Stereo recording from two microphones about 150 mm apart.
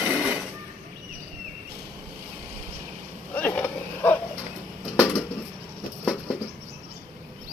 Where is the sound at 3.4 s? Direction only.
10° left (ahead or behind).